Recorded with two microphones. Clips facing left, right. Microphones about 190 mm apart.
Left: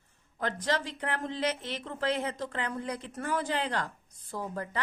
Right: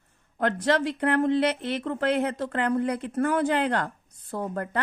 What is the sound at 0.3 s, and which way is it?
A woman's voice, 60° right (ahead or behind).